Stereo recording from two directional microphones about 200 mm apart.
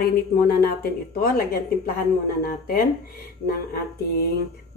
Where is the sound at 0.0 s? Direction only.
50° left (ahead or behind).